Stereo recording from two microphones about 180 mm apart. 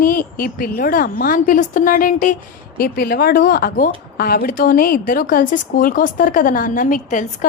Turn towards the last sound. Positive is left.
turn(degrees=45)  # may be behind; listen again after turning